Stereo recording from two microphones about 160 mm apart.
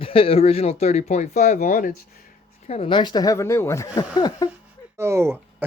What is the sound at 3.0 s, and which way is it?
Speech, 25° left (ahead or behind).